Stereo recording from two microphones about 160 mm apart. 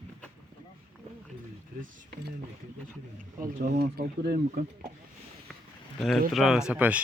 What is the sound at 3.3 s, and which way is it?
Speech, 65° right (ahead or behind).